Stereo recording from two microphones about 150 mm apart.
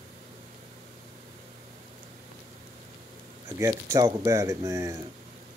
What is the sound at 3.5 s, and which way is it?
Speech, 20° right (ahead or behind).